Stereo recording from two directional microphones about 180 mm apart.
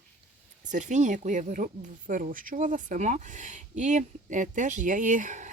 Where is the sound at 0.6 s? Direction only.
45° right (ahead or behind).